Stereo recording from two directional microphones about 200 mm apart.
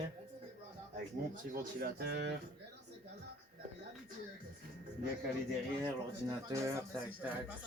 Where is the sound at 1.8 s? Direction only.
55° right (ahead or behind).